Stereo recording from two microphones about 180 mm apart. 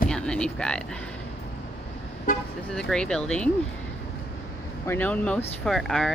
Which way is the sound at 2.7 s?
5° left (ahead or behind).